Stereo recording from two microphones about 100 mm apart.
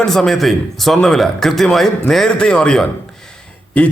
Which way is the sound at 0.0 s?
5° left (ahead or behind).